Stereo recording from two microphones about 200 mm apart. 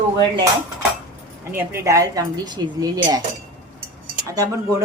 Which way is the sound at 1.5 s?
10° right (ahead or behind).